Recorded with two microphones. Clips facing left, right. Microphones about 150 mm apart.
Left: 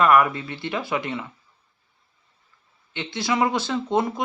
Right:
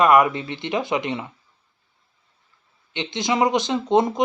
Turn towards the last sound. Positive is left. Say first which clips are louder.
# right 4 dB
turn(degrees=-20)  # may be behind; listen again after turning